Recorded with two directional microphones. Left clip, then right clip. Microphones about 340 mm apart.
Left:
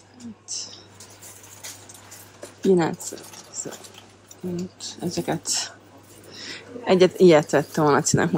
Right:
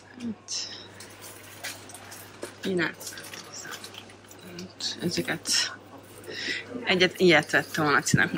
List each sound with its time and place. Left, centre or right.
0.5 s speech: centre
2.6 s speech: centre
4.7 s speech: centre